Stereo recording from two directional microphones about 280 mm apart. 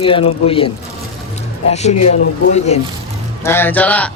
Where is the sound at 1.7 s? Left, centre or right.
Left.